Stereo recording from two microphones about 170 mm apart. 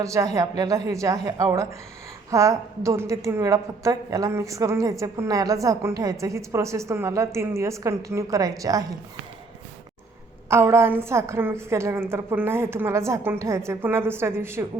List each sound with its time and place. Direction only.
0.0 s a woman's voice: 20° right (ahead or behind)
10.5 s a woman's voice: 15° right (ahead or behind)